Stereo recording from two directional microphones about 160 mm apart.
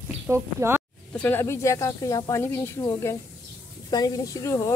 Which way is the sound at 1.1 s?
15° left (ahead or behind).